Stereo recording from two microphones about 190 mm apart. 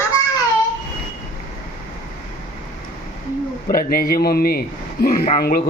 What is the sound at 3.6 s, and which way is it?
A man's voice, 50° left (ahead or behind).